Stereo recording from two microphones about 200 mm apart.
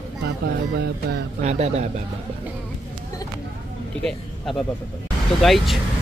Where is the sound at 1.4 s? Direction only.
35° right (ahead or behind).